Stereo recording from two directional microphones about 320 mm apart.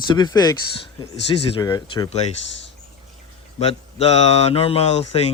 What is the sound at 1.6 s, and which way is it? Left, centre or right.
Speech, centre.